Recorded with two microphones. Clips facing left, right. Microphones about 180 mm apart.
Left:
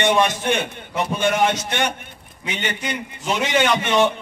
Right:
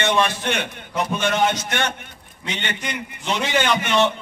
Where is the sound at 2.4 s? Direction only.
10° left (ahead or behind).